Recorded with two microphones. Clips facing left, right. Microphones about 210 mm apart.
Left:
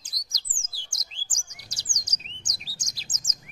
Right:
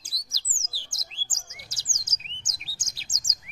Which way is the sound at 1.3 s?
5° right (ahead or behind).